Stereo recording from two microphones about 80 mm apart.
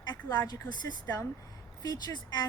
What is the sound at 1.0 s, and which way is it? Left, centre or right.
A woman's voice, left.